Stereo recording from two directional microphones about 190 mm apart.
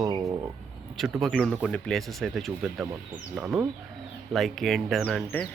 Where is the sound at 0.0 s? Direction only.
20° right (ahead or behind).